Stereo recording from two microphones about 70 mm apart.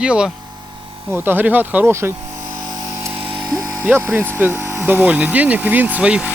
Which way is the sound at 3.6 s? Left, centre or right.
Right.